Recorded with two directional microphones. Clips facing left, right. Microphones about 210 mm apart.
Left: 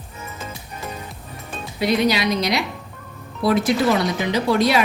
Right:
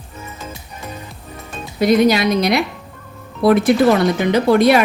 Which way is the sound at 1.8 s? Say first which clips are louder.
Right 6 dB; 45° right (ahead or behind).